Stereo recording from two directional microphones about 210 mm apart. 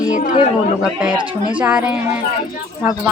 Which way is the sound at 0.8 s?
5° right (ahead or behind).